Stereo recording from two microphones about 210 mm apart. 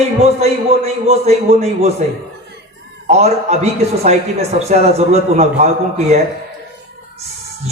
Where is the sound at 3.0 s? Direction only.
30° right (ahead or behind).